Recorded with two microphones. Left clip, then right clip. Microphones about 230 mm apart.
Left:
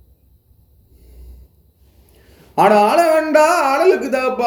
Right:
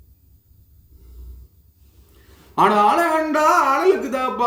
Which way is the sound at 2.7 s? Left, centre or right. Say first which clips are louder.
Left 4 dB; right.